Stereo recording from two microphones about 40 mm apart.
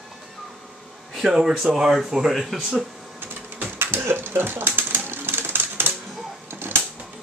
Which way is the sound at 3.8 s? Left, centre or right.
Right.